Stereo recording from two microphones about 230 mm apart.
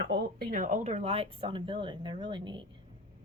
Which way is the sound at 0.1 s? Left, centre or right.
Right.